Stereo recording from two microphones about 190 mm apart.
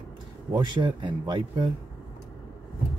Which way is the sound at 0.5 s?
25° right (ahead or behind).